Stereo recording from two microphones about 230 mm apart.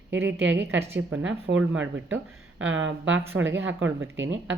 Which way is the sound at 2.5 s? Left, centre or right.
Right.